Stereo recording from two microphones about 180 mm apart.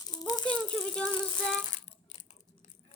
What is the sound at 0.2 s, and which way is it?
Rattle, 20° left (ahead or behind).